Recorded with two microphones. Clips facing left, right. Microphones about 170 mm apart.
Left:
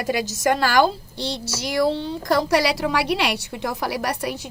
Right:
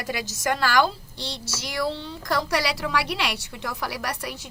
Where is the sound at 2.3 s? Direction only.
25° left (ahead or behind).